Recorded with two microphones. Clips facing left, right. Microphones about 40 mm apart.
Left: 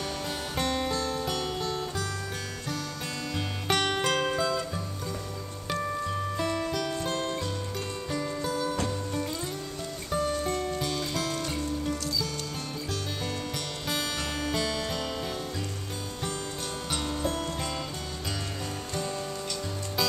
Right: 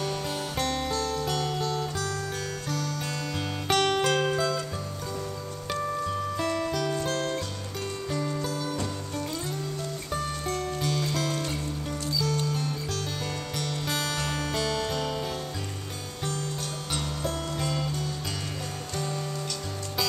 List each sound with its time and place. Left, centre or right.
0.6 s music: centre
3.3 s music: centre
5.7 s music: centre
10.1 s music: centre
13.8 s music: centre
16.9 s music: centre